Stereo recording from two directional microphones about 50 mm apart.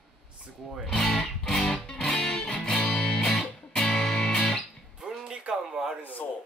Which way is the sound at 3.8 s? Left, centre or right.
Centre.